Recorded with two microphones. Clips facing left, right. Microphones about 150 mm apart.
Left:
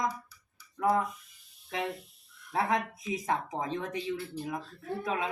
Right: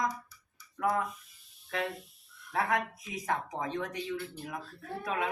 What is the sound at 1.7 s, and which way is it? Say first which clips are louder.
A woman's voice: left 1 dB; 20° left (ahead or behind).